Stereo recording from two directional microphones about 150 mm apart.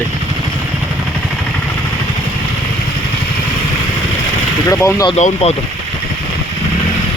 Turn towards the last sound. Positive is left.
turn(degrees=50)  # may be behind; listen again after turning